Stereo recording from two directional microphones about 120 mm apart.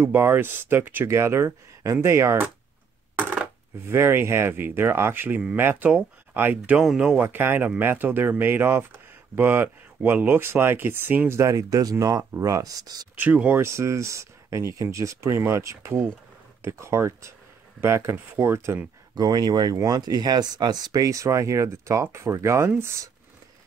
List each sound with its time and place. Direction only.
0.0 s speech: 15° right (ahead or behind)
3.2 s coin: 15° right (ahead or behind)
3.9 s speech: 20° right (ahead or behind); by 7.2 s 5° right (ahead or behind)
7.2 s speech: 15° right (ahead or behind)
13.2 s speech: 15° right (ahead or behind)
19.1 s speech: 35° right (ahead or behind)